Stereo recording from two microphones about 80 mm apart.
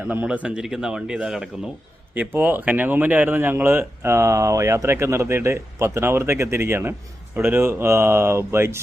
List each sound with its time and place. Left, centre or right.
0.0 s speech: centre
0.4 s speech: centre
2.1 s speech: right